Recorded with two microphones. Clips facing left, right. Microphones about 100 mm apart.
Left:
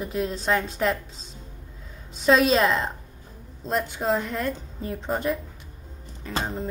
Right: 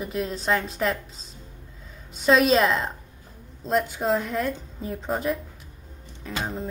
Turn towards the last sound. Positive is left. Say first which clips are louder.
# even
turn(degrees=0)  # may be behind; listen again after turning